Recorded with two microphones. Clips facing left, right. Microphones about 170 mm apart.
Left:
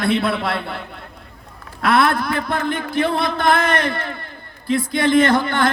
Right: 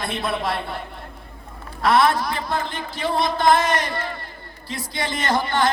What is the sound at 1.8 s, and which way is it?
Speech, 60° left (ahead or behind).